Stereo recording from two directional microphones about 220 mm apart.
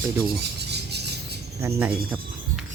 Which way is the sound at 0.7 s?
50° right (ahead or behind).